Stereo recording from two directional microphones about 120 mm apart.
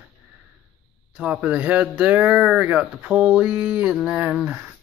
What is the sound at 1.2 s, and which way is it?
Speech, 10° right (ahead or behind).